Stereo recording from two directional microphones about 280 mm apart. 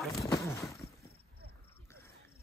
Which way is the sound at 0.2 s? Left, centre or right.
Centre.